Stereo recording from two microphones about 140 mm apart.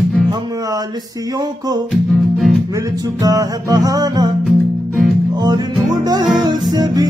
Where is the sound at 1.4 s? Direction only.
30° right (ahead or behind).